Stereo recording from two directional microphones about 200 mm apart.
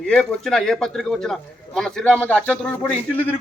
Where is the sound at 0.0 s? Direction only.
5° left (ahead or behind).